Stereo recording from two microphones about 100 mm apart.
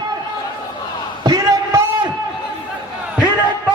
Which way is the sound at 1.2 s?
40° right (ahead or behind).